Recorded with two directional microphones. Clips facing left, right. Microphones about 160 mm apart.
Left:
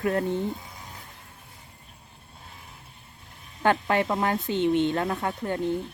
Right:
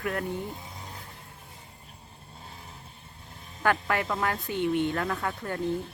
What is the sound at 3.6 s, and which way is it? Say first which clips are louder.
Speech: left 4 dB; 25° left (ahead or behind).